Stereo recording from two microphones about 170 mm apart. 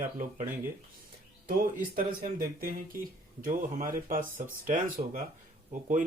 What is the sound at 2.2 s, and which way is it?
Speech, 60° right (ahead or behind).